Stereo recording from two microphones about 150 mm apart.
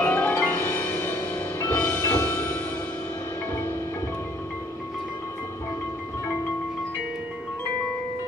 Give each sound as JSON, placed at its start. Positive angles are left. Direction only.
{"t": 0.0, "sound": "music", "side_deg": 10}